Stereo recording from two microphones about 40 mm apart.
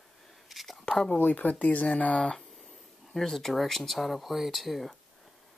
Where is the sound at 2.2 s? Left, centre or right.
Left.